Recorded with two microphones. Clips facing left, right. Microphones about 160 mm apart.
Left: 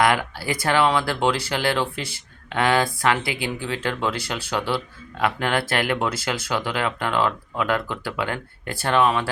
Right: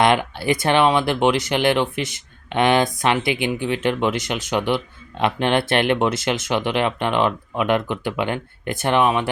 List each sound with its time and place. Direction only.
0.0 s speech: 25° right (ahead or behind)